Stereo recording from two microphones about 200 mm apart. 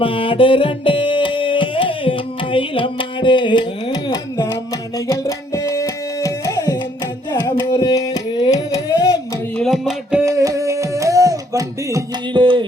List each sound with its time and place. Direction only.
0.0 s music: 25° left (ahead or behind)
4.9 s tabla: 20° left (ahead or behind)
7.3 s carnatic music: 20° left (ahead or behind)
9.6 s music: centre (ahead or behind)
10.2 s music: 15° right (ahead or behind)